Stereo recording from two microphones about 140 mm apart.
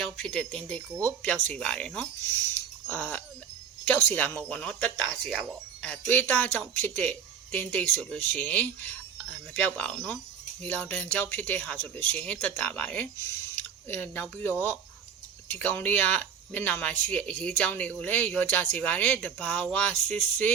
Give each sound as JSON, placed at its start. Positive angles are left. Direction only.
{"t": 0.0, "sound": "speech", "side_deg": 5}